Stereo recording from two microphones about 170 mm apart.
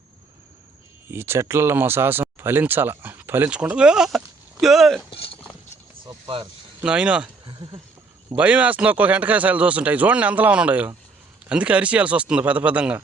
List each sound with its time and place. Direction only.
1.1 s speech: 15° right (ahead or behind)
5.1 s clip-clop: 35° left (ahead or behind)
6.1 s a sound: 30° right (ahead or behind)
6.8 s speech: 5° right (ahead or behind)
7.4 s a sound: 25° right (ahead or behind)
8.4 s speech: 10° right (ahead or behind)